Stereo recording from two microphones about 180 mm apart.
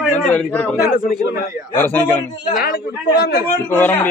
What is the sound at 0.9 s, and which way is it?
Speech, 55° left (ahead or behind).